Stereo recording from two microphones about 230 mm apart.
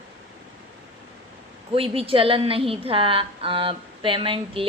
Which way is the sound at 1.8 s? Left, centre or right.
Right.